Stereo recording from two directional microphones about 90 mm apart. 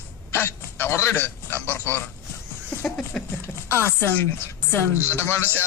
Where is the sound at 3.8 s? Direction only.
25° left (ahead or behind).